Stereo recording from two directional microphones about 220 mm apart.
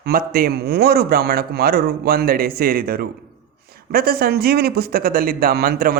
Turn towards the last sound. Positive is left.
turn(degrees=-45)  # may be behind; listen again after turning